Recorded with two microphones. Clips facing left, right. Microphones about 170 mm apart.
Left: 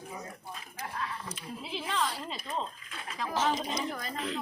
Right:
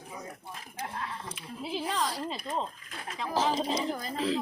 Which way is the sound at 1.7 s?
40° right (ahead or behind).